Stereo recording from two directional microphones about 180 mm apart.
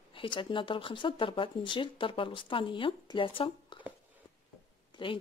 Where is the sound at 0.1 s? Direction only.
30° left (ahead or behind).